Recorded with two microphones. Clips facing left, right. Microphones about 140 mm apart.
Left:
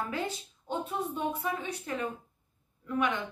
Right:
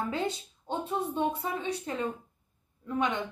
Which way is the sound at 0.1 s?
25° right (ahead or behind).